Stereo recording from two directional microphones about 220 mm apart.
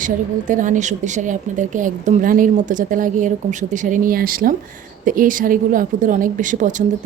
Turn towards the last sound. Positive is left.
turn(degrees=-35)  # may be behind; listen again after turning